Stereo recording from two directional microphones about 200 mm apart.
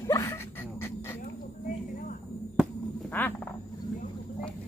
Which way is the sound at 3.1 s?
10° left (ahead or behind).